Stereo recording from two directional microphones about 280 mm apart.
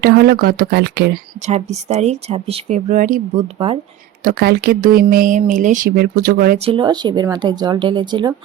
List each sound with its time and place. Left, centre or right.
0.0 s speech: right
1.5 s speech: right
4.2 s speech: right
6.7 s speech: centre